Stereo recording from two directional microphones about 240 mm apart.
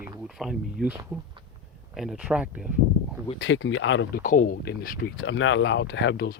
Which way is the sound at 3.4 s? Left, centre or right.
Left.